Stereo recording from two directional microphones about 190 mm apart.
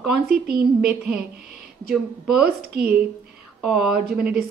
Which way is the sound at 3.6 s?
Centre (ahead or behind).